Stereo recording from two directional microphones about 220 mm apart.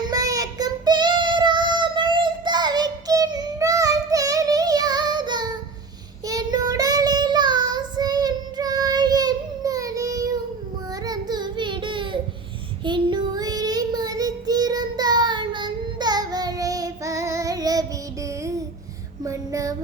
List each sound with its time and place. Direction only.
0.1 s child singing: 15° right (ahead or behind)
19.2 s female singing: 15° right (ahead or behind)